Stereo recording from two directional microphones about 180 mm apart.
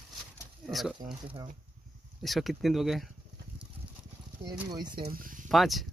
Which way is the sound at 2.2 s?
Centre (ahead or behind).